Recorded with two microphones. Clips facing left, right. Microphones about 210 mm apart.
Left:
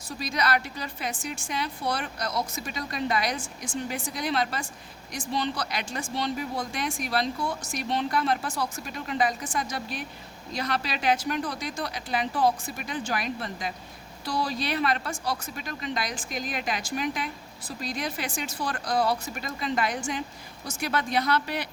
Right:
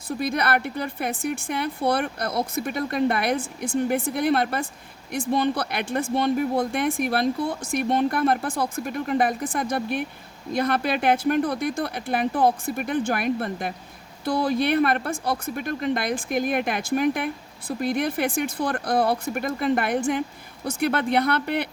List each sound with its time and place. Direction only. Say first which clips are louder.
0.1 s speech: right 4 dB; 55° right (ahead or behind)